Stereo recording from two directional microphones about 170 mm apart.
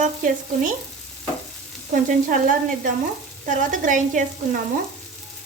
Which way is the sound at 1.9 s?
55° right (ahead or behind).